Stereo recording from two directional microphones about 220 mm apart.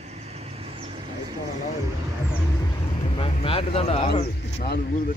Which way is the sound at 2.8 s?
25° left (ahead or behind).